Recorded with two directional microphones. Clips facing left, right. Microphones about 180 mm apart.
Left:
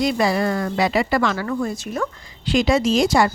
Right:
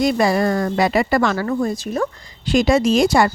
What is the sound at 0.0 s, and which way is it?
Speech, 45° right (ahead or behind).